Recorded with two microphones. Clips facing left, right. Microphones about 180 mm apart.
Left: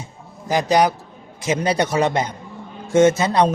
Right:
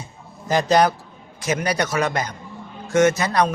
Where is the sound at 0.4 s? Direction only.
15° left (ahead or behind).